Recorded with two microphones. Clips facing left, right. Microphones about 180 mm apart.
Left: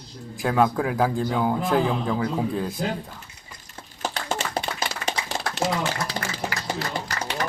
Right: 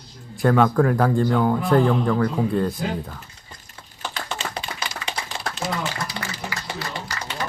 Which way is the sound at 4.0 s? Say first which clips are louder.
Left 3 dB; 45° left (ahead or behind).